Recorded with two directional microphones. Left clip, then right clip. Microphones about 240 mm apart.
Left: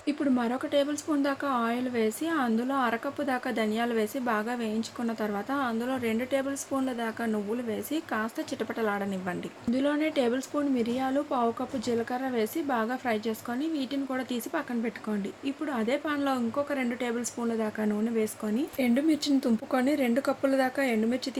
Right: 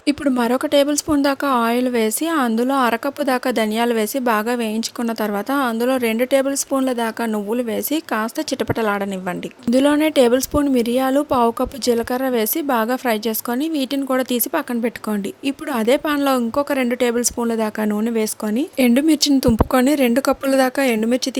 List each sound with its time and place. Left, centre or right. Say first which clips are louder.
0.0 s a woman's voice: right 9 dB; right
9.6 s a woman's voice: right 12 dB; right